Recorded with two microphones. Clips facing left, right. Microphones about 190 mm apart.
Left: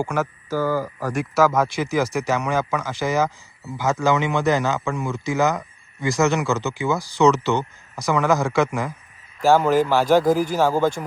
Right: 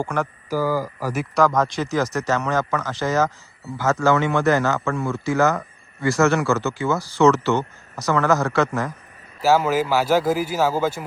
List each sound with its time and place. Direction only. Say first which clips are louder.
0.0 s speech: left 1 dB; 10° left (ahead or behind)
0.5 s speech: even; 10° right (ahead or behind); by 8.9 s 15° left (ahead or behind)
9.4 s a man's voice: left 2 dB; 5° right (ahead or behind)